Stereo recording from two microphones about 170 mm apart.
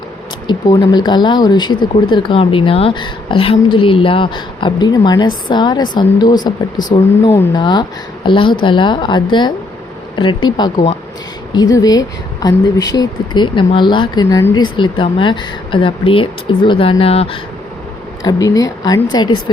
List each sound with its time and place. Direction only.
0.4 s speech: 25° left (ahead or behind)
18.3 s speech: 20° left (ahead or behind)